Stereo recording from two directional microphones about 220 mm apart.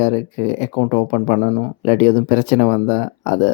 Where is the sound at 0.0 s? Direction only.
35° left (ahead or behind).